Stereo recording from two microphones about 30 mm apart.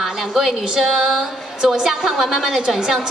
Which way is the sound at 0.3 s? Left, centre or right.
Centre.